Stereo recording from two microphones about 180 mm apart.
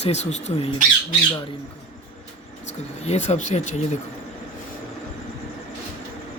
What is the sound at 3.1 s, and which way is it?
Speech, 40° left (ahead or behind).